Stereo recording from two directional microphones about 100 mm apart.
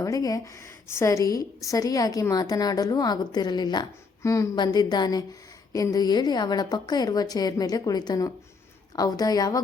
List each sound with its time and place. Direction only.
0.0 s a woman's voice: 35° left (ahead or behind)
4.2 s speech: 30° left (ahead or behind)
4.5 s a woman's voice: 45° left (ahead or behind)